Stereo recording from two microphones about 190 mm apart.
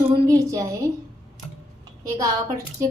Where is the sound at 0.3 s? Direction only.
15° right (ahead or behind).